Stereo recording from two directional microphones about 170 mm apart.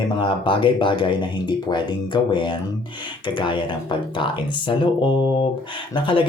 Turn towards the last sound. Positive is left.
turn(degrees=30)  # may be behind; listen again after turning